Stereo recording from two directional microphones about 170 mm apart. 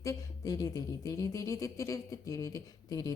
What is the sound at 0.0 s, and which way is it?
Speech, 20° left (ahead or behind).